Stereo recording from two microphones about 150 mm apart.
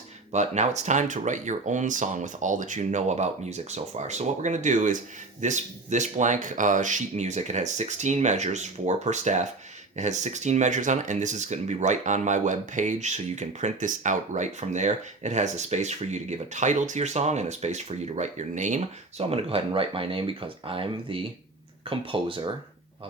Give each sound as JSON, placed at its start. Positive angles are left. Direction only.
{"t": 0.3, "sound": "speech", "side_deg": -50}